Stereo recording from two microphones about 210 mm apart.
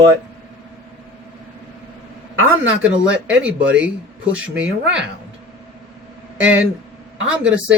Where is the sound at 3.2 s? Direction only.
5° right (ahead or behind).